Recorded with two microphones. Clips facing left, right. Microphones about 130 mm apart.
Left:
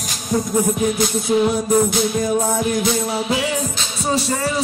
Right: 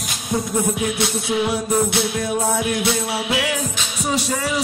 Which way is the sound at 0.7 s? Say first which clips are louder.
Left 3 dB; 40° left (ahead or behind).